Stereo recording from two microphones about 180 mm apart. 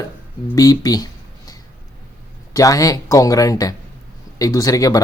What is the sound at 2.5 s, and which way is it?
Speech, 20° left (ahead or behind).